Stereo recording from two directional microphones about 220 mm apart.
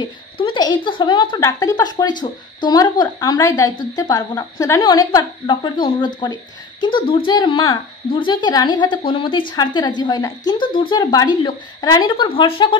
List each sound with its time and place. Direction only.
0.0 s a woman's voice: 20° left (ahead or behind)